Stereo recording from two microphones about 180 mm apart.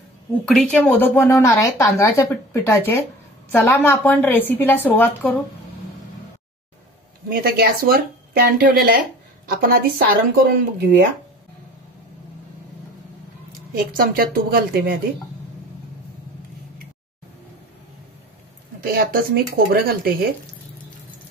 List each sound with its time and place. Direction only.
0.5 s a woman's voice: 5° left (ahead or behind)
7.2 s speech: 55° right (ahead or behind)
13.5 s speech: 55° right (ahead or behind)
18.8 s speech: 55° right (ahead or behind)